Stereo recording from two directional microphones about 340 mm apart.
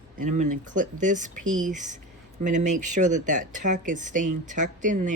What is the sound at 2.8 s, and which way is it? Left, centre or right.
Speech, right.